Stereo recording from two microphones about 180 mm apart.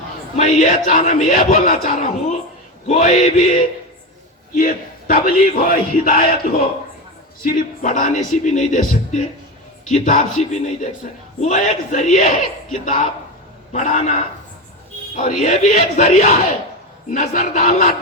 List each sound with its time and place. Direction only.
0.3 s a man's voice: 45° left (ahead or behind)
15.4 s a man's voice: 50° left (ahead or behind)